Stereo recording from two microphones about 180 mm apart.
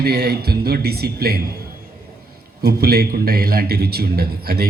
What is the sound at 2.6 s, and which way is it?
Speech, 60° right (ahead or behind).